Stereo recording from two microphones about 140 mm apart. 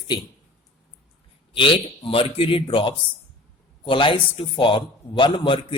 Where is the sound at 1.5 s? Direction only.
40° left (ahead or behind).